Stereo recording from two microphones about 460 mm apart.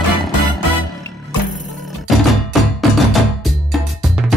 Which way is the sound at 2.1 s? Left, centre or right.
Centre.